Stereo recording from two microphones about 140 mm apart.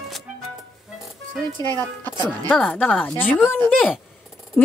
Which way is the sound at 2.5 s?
10° left (ahead or behind).